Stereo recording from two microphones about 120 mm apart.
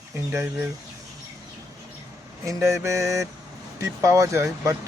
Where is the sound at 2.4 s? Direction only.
25° right (ahead or behind).